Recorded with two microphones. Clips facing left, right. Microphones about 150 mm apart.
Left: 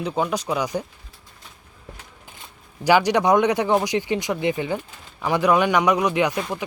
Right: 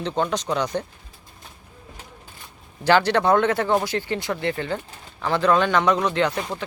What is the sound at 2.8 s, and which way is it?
Speech, 10° left (ahead or behind).